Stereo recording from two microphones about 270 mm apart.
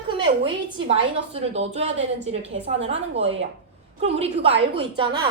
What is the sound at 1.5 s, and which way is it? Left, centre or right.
Speech, right.